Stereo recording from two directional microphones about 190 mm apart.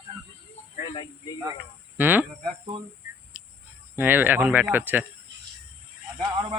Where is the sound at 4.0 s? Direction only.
10° right (ahead or behind).